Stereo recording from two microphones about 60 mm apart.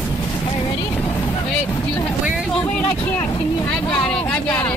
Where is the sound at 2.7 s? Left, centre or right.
Left.